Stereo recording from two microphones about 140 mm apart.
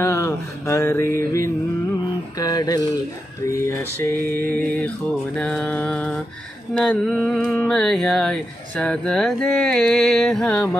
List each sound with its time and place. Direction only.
0.0 s mantra: 20° left (ahead or behind)
6.8 s speech: 5° left (ahead or behind)